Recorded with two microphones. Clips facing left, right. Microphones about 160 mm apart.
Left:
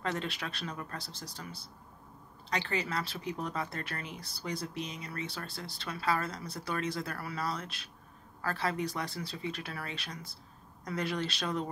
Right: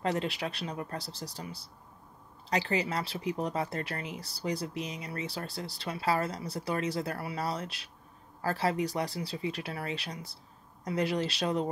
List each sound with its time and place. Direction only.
0.0 s speech: 35° right (ahead or behind)
2.5 s a woman's voice: 35° right (ahead or behind)